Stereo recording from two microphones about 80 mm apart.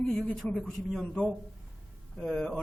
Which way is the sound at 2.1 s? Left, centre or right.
Centre.